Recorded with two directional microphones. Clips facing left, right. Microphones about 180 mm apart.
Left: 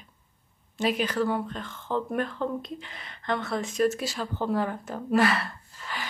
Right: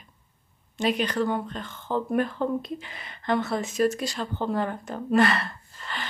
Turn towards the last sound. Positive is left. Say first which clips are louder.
# even
turn(degrees=10)  # may be behind; listen again after turning